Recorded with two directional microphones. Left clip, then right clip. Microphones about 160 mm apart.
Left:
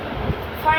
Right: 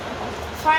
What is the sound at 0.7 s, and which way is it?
Vehicle, 20° left (ahead or behind).